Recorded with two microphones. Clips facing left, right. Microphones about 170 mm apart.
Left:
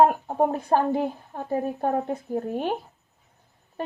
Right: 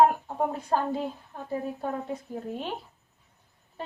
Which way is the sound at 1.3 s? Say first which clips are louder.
Left 5 dB; 55° left (ahead or behind).